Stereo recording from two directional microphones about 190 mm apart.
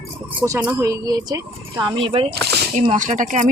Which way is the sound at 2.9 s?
40° right (ahead or behind).